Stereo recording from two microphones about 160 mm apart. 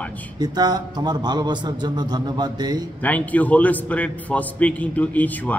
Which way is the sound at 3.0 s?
10° left (ahead or behind).